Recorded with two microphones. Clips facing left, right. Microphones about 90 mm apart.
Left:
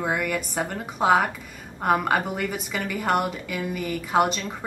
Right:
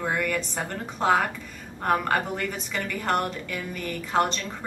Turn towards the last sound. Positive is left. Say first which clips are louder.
# left 3 dB
turn(degrees=10)  # may be behind; listen again after turning